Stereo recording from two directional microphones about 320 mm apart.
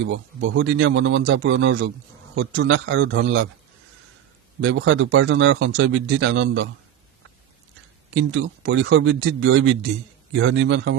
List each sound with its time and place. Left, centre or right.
0.0 s speech: right
4.6 s speech: right
8.1 s speech: right